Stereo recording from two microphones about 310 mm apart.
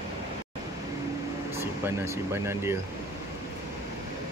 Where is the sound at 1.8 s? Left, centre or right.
Centre.